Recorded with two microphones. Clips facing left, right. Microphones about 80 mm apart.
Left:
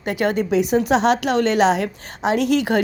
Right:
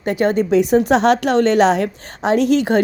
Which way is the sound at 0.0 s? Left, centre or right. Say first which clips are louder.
Right 4 dB; right.